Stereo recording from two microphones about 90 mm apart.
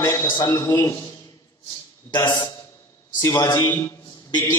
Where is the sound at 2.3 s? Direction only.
50° left (ahead or behind).